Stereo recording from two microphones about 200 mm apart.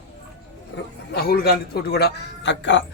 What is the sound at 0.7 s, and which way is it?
A man's voice, 50° left (ahead or behind).